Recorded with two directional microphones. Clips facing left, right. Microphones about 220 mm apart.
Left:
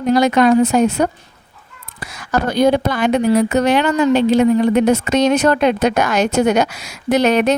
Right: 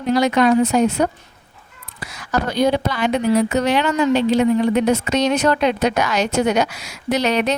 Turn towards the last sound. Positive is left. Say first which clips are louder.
# left 5 dB
turn(degrees=50)  # may be behind; listen again after turning